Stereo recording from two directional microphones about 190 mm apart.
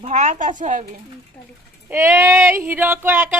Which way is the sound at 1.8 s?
10° right (ahead or behind).